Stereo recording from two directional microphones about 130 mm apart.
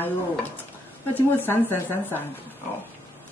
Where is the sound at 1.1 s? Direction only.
15° left (ahead or behind).